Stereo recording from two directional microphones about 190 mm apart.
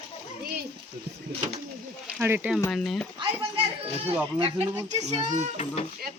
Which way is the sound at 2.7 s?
Centre (ahead or behind).